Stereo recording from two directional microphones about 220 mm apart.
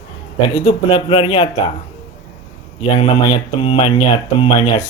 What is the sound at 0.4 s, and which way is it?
Speech, 20° left (ahead or behind).